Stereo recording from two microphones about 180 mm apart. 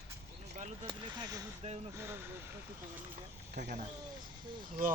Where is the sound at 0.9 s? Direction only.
25° right (ahead or behind).